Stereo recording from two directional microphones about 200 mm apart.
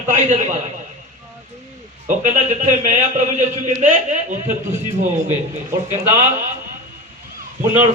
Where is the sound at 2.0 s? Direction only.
40° right (ahead or behind).